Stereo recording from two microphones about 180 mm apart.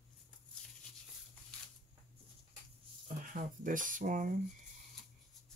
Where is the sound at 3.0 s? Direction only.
50° right (ahead or behind).